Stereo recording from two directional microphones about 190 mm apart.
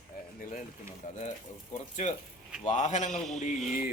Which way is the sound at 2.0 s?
35° left (ahead or behind).